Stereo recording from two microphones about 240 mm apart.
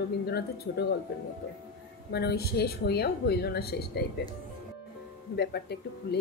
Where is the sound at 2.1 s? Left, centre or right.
Left.